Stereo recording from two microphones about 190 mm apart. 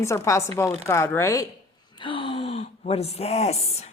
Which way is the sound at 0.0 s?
15° left (ahead or behind).